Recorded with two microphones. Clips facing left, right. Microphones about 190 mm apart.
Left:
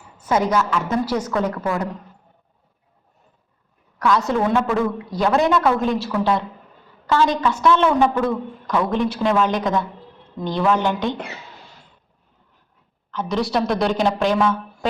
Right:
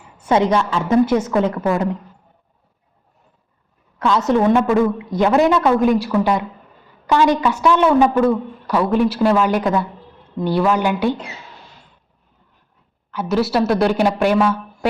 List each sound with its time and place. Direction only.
0.2 s a woman's voice: 30° right (ahead or behind)
3.9 s a woman's voice: 25° right (ahead or behind)
13.1 s a woman's voice: 5° right (ahead or behind)